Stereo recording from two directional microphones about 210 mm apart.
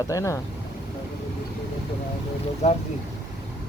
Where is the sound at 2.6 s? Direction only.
35° left (ahead or behind).